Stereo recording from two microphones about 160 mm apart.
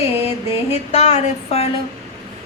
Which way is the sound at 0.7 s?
45° left (ahead or behind).